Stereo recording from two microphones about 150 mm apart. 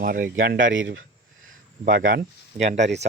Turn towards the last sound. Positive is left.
turn(degrees=-50)  # may be behind; listen again after turning